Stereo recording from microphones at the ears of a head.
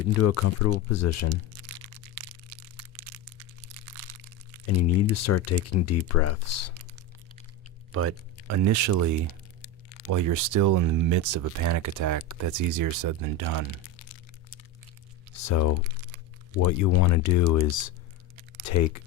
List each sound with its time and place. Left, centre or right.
0.0 s speech: left
1.5 s crushing: right
4.6 s speech: left
8.4 s speech: right
13.8 s a sound: left
15.3 s speech: left